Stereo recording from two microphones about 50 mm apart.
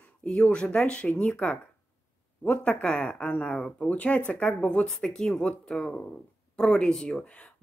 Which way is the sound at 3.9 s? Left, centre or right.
Left.